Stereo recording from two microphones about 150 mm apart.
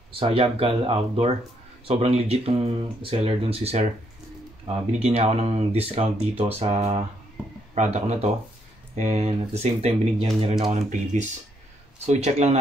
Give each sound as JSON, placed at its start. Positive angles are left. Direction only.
{"t": 0.1, "sound": "speech", "side_deg": -35}
{"t": 7.4, "sound": "a sound", "side_deg": -5}
{"t": 7.7, "sound": "speech", "side_deg": -50}